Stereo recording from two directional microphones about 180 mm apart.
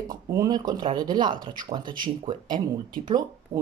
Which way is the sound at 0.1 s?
20° right (ahead or behind).